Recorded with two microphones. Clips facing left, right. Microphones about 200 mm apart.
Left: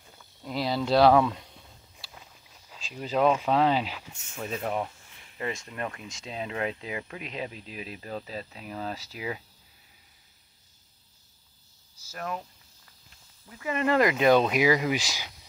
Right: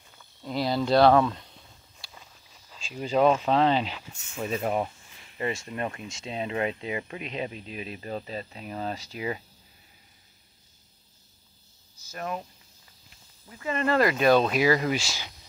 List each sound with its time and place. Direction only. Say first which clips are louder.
0.2 s speech: right 2 dB; 5° left (ahead or behind)
2.0 s a sound: even; 5° left (ahead or behind)
4.4 s speech: right 3 dB; 10° right (ahead or behind)
12.1 s speech: right 1 dB; 10° right (ahead or behind)
13.6 s speech: even; 15° left (ahead or behind)